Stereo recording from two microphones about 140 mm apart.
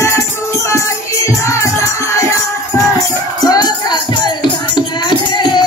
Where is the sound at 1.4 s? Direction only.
20° left (ahead or behind).